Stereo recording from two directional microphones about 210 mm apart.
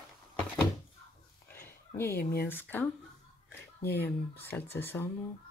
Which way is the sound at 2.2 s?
45° left (ahead or behind).